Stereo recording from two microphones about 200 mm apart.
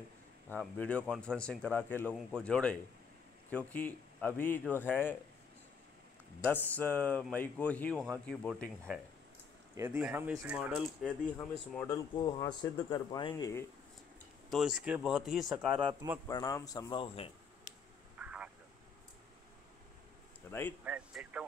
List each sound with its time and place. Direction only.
0.5 s speech: 5° left (ahead or behind)
6.4 s speech: 10° left (ahead or behind)
9.8 s speech: 10° right (ahead or behind)
11.2 s speech: 10° left (ahead or behind)
14.5 s speech: centre (ahead or behind)
15.8 s speech: 25° right (ahead or behind)
16.3 s speech: 15° left (ahead or behind)
18.2 s vehicle: 5° right (ahead or behind)
20.5 s a sound: 10° left (ahead or behind)
20.8 s speech: 5° right (ahead or behind)